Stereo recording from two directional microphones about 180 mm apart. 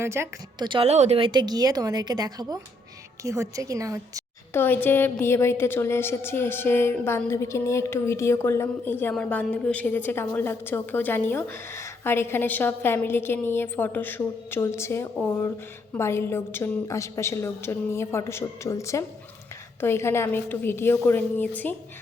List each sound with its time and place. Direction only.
0.0 s a woman's voice: 15° right (ahead or behind)
0.7 s a woman's voice: 35° right (ahead or behind); by 4.2 s 20° right (ahead or behind)
4.5 s a woman's voice: 10° left (ahead or behind)